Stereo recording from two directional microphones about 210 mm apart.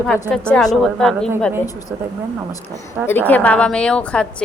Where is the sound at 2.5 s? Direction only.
15° left (ahead or behind).